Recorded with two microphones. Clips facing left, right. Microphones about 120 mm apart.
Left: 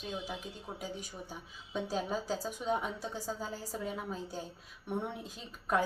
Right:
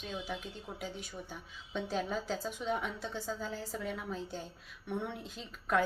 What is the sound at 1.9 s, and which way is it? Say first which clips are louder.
A woman's voice: even; 35° left (ahead or behind).